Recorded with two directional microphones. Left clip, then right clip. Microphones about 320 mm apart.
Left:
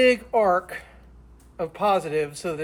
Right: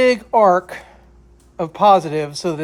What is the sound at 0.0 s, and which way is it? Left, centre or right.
Speech, centre.